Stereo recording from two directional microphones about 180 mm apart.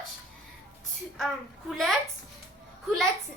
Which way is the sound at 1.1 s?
Centre (ahead or behind).